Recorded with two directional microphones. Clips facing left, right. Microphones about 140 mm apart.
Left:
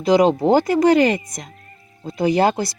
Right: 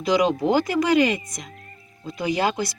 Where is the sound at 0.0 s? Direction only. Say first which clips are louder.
Left 5 dB; 35° left (ahead or behind).